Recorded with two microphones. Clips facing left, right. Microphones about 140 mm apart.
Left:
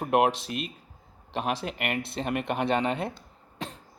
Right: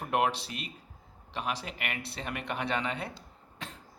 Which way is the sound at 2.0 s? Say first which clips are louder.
Left 8 dB; 20° left (ahead or behind).